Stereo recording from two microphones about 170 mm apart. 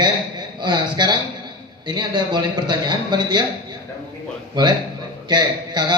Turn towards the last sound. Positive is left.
turn(degrees=-25)  # may be behind; listen again after turning